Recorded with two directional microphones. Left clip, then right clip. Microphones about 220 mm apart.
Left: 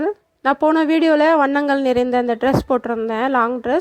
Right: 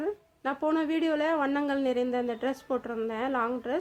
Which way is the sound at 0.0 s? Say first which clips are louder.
Left 12 dB; 35° left (ahead or behind).